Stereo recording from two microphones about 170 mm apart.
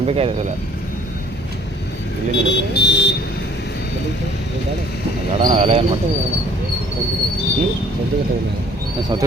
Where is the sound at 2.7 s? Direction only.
85° left.